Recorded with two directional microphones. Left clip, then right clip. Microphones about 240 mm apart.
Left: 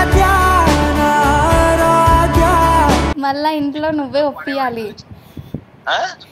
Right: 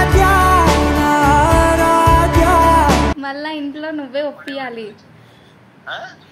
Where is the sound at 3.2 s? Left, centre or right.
Left.